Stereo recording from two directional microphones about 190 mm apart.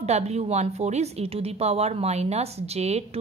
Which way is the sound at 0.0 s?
35° right (ahead or behind).